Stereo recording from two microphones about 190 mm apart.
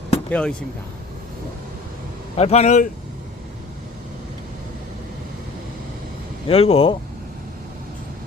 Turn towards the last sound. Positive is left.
turn(degrees=30)  # may be behind; listen again after turning